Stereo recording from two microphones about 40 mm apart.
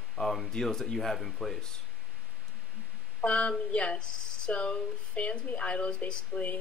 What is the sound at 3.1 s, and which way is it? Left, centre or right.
Speech, left.